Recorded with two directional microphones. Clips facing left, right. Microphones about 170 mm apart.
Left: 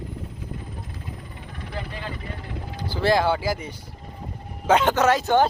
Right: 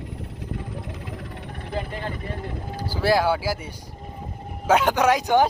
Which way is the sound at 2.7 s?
10° right (ahead or behind).